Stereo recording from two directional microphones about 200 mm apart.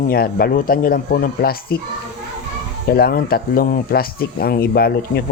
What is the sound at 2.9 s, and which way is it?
Speech, 50° left (ahead or behind).